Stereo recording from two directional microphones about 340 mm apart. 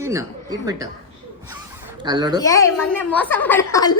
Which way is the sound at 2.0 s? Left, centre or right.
Centre.